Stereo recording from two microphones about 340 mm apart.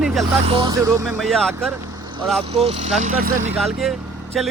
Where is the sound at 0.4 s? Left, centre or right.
Centre.